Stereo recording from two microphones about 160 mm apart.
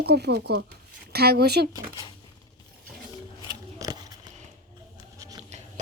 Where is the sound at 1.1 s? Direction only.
80° right.